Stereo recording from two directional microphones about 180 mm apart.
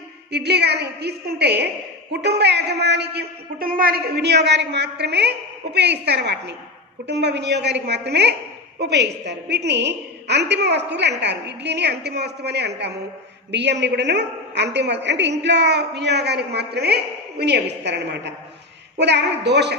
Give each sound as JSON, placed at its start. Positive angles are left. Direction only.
{"t": 0.3, "sound": "a woman's voice", "side_deg": -65}